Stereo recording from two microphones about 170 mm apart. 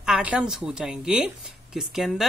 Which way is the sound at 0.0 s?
5° right (ahead or behind).